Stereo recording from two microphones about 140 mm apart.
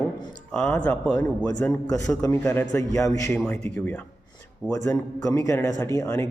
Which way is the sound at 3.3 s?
10° left (ahead or behind).